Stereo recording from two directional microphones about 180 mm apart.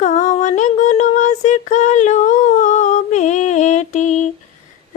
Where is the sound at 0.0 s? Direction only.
40° left (ahead or behind).